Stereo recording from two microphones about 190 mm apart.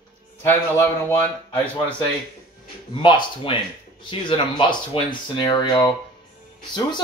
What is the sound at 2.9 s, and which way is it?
Speech, 25° left (ahead or behind).